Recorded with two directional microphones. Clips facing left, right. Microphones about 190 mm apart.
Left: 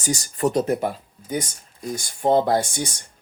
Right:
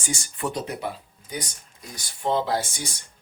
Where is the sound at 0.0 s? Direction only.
40° left (ahead or behind).